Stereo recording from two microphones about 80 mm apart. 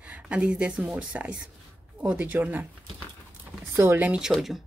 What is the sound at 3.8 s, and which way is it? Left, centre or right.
Speech, right.